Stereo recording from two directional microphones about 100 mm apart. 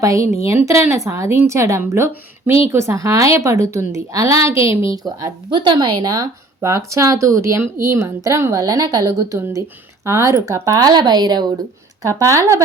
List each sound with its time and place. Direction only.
0.0 s a woman's voice: 30° right (ahead or behind)
5.0 s speech: 50° right (ahead or behind)
6.6 s a woman's voice: 30° right (ahead or behind)
12.0 s a woman's voice: 30° right (ahead or behind)